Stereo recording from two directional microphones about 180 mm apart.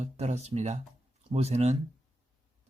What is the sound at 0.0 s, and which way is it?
Speech, 40° right (ahead or behind).